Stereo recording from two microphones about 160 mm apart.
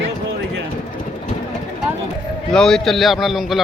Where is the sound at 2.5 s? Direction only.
5° left (ahead or behind).